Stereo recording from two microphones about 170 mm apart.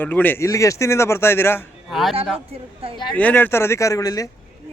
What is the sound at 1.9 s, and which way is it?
Speech, centre (ahead or behind).